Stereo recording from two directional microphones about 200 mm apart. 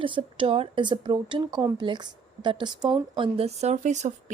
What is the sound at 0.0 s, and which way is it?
A woman's voice, 25° right (ahead or behind).